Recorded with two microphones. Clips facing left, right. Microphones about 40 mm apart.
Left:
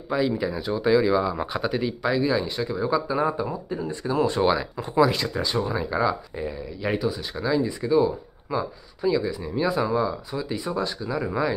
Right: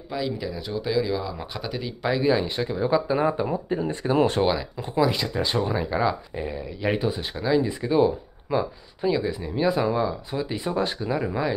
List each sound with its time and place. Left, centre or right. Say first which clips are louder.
0.1 s speech: left 5 dB; centre
2.0 s speech: right 3 dB; centre
3.6 s speech: right 3 dB; right
4.4 s speech: left 1 dB; centre
5.4 s speech: right 3 dB; centre
7.0 s speech: even; right
11.2 s speech: left 4 dB; centre